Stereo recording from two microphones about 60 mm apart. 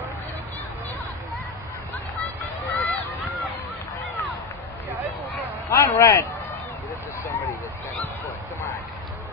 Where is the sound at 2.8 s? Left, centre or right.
Left.